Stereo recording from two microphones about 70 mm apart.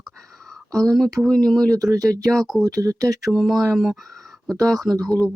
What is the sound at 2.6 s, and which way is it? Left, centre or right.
Speech, right.